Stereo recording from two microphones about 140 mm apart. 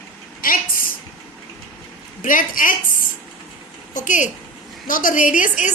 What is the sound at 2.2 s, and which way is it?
Speech, 75° left (ahead or behind).